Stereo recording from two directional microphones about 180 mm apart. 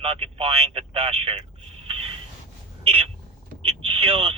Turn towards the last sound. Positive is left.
turn(degrees=-30)  # may be behind; listen again after turning